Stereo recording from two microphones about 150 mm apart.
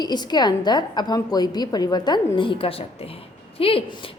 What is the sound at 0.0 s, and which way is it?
A woman's voice, 30° left (ahead or behind).